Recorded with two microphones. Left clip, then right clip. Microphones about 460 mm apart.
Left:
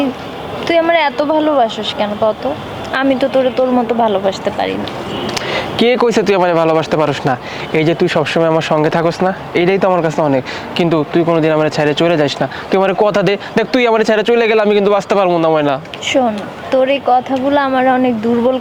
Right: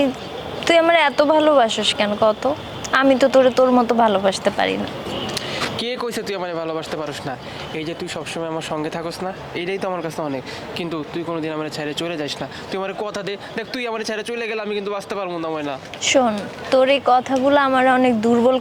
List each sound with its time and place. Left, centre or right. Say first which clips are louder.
0.6 s speech: left 2 dB; right
5.3 s speech: left 8 dB; left
7.8 s speech: left 16 dB; left
16.0 s speech: left 3 dB; centre